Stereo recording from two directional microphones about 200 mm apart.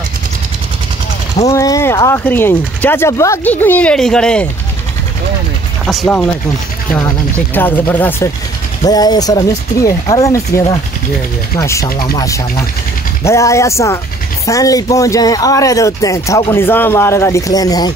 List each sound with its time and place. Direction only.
1.5 s speech: 15° left (ahead or behind)
5.9 s speech: centre (ahead or behind)
7.0 s speech: 10° left (ahead or behind)